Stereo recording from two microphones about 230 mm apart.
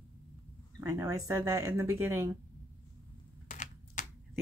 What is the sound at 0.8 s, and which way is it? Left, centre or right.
Speech, centre.